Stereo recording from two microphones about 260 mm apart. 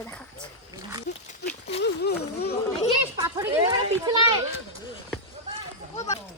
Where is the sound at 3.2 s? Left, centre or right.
Centre.